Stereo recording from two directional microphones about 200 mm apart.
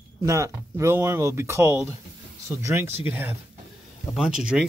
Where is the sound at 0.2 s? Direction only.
15° right (ahead or behind).